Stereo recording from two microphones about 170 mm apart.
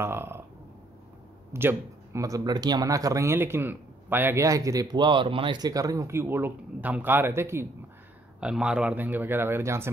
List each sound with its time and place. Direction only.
0.0 s speech: 15° right (ahead or behind)
1.5 s speech: 15° right (ahead or behind)